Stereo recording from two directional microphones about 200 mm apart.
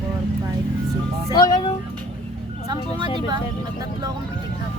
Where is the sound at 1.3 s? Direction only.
20° left (ahead or behind).